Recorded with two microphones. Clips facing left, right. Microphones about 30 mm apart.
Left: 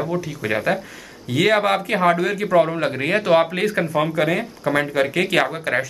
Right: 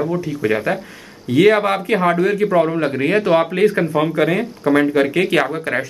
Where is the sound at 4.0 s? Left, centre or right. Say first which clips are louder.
Right 2 dB; centre.